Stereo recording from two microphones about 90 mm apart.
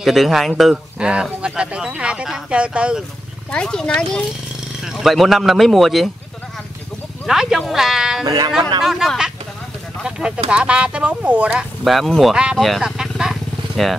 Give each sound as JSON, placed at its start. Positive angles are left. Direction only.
{"t": 0.0, "sound": "speech", "side_deg": 0}
{"t": 0.9, "sound": "speech", "side_deg": -10}
{"t": 3.5, "sound": "speech", "side_deg": 10}
{"t": 7.2, "sound": "speech", "side_deg": -5}
{"t": 8.3, "sound": "speech", "side_deg": -50}
{"t": 8.8, "sound": "speech", "side_deg": -5}
{"t": 11.8, "sound": "speech", "side_deg": 0}
{"t": 12.6, "sound": "vehicle", "side_deg": -5}